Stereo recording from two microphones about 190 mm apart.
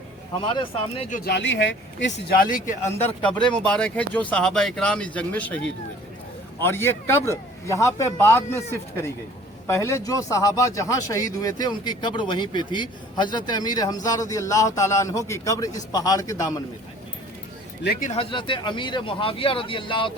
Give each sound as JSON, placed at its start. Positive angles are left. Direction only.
{"t": 0.4, "sound": "speech", "side_deg": 30}
{"t": 1.1, "sound": "speech", "side_deg": 60}
{"t": 3.2, "sound": "speech", "side_deg": 5}
{"t": 6.6, "sound": "a man's voice", "side_deg": 10}
{"t": 18.1, "sound": "speech", "side_deg": 30}